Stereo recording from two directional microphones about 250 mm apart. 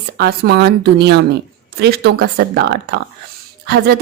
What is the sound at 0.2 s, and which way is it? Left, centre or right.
A woman's voice, right.